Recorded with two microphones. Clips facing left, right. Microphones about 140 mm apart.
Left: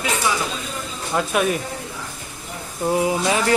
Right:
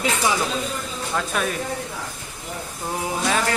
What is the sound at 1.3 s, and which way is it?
Speech, 10° left (ahead or behind).